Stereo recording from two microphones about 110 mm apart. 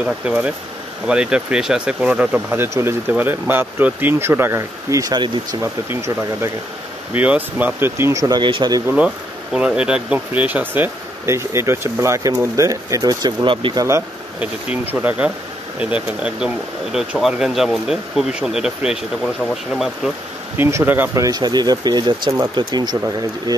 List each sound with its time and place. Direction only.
0.0 s speech: 10° right (ahead or behind); by 5.1 s 30° right (ahead or behind)
5.1 s speech: 45° right (ahead or behind)
5.6 s speech: 25° right (ahead or behind)
7.2 s speech: 15° right (ahead or behind); by 8.4 s 30° right (ahead or behind)
8.4 s speech: 45° right (ahead or behind)
8.8 s speech: 10° right (ahead or behind); by 13.7 s 50° right (ahead or behind)
13.7 s speech: 25° right (ahead or behind)
14.4 s speech: 15° right (ahead or behind)
20.5 s speech: 20° right (ahead or behind)
21.1 s speech: 35° right (ahead or behind)